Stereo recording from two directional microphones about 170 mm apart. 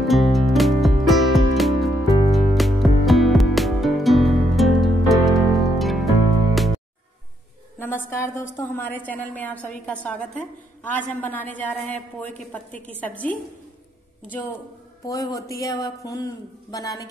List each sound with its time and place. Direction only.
0.0 s music: centre (ahead or behind)
7.8 s a woman's voice: 15° left (ahead or behind)
15.0 s a man's voice: 20° left (ahead or behind)